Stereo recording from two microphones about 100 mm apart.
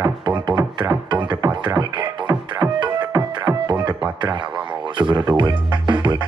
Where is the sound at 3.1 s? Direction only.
35° right (ahead or behind).